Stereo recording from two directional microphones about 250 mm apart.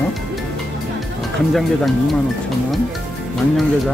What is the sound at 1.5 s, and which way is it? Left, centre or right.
Speech, centre.